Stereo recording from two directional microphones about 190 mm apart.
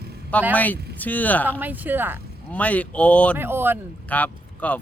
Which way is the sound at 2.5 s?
5° left (ahead or behind).